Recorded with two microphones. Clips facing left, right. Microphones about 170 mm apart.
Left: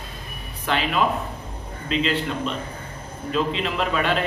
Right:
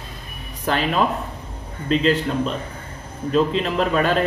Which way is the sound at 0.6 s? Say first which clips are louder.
Right 2 dB; 40° right (ahead or behind).